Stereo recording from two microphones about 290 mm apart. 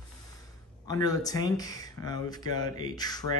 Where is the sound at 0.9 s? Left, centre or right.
Centre.